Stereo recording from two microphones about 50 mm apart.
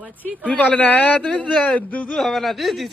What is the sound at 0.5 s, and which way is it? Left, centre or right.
Speech, left.